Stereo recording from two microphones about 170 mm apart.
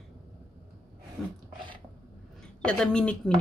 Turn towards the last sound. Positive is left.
turn(degrees=5)  # may be behind; listen again after turning